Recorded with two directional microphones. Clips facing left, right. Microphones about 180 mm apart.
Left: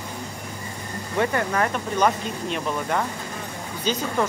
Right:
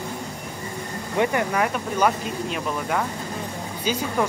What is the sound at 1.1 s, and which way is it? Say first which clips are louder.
Speech: right 1 dB; 15° right (ahead or behind).